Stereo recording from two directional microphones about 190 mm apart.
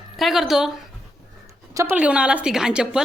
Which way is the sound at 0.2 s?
Centre (ahead or behind).